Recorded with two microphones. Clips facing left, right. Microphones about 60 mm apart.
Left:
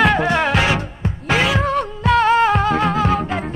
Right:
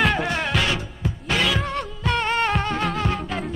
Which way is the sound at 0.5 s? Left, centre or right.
Left.